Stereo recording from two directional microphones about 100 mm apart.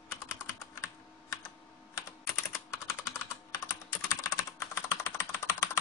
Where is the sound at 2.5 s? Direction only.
25° left (ahead or behind).